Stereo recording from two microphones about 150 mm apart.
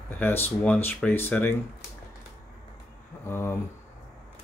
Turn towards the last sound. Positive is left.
turn(degrees=15)  # may be behind; listen again after turning